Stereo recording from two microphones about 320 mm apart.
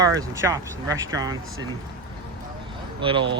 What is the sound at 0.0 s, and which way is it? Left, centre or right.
Speech, centre.